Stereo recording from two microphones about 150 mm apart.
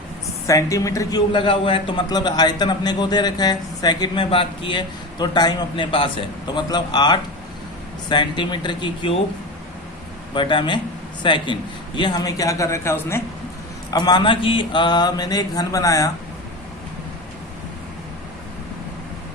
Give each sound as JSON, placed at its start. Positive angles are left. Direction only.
{"t": 0.4, "sound": "a man's voice", "side_deg": 20}
{"t": 1.3, "sound": "a man's voice", "side_deg": 35}
{"t": 10.3, "sound": "a man's voice", "side_deg": 35}
{"t": 13.9, "sound": "a man's voice", "side_deg": 30}